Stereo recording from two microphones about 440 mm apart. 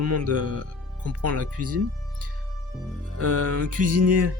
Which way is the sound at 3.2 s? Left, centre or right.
Right.